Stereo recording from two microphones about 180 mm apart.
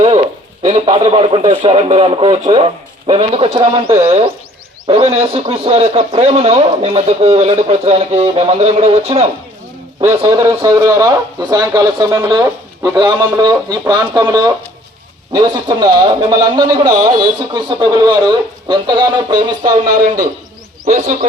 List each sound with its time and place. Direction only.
0.6 s speech: 35° right (ahead or behind)
10.2 s a man's voice: 20° right (ahead or behind)
15.3 s a man's voice: 20° right (ahead or behind)
20.8 s a man's voice: 45° right (ahead or behind)